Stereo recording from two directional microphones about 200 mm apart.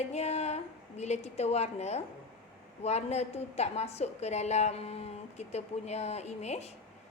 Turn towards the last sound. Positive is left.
turn(degrees=35)  # may be behind; listen again after turning